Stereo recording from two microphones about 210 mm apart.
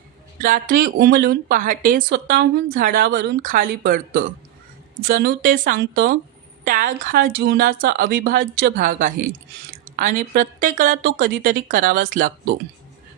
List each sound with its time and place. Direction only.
0.4 s a woman's voice: 40° right (ahead or behind)